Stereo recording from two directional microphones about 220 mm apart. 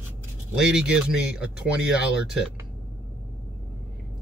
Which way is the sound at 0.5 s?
5° right (ahead or behind).